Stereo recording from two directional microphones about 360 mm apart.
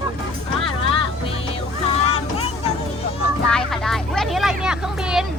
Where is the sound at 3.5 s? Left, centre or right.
Centre.